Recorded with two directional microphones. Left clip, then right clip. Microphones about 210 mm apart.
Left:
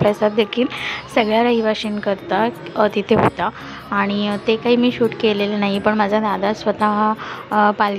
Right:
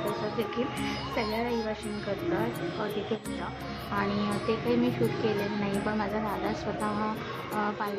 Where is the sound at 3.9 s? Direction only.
40° left (ahead or behind).